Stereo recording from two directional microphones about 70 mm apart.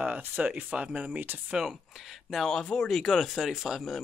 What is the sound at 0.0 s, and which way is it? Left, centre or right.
Speech, centre.